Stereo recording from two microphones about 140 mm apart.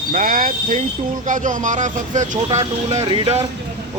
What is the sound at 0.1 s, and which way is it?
Speech, 85° right.